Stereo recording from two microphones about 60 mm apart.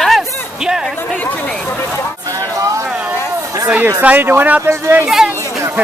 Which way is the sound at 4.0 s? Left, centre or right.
Right.